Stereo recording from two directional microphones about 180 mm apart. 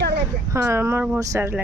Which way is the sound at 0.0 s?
65° right (ahead or behind).